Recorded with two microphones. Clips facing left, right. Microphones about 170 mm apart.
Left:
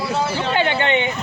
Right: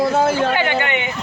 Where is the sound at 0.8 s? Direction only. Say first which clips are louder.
Left 3 dB; 25° left (ahead or behind).